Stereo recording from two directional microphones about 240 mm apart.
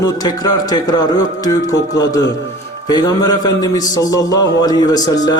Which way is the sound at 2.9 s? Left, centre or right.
Centre.